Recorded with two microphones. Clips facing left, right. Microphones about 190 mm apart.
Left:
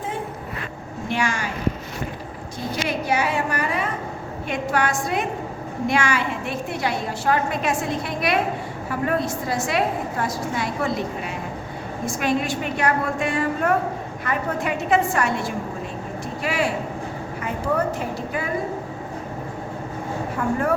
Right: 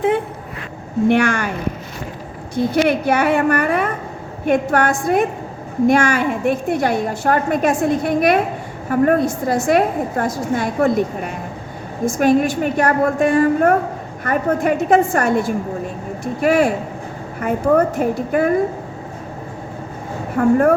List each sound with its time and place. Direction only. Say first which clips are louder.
1.0 s a woman's voice: right 10 dB; 60° right (ahead or behind)
2.8 s a woman's voice: right 3 dB; 60° right (ahead or behind)
20.3 s a woman's voice: right 10 dB; 55° right (ahead or behind)